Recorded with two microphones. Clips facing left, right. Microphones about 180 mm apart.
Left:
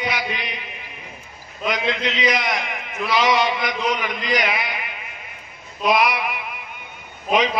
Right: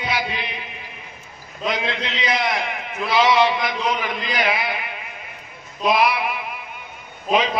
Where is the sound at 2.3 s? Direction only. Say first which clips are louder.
Right 1 dB; 30° right (ahead or behind).